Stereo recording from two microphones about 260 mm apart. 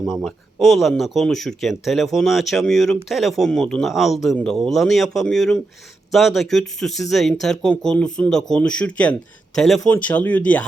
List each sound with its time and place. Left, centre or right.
0.0 s speech: centre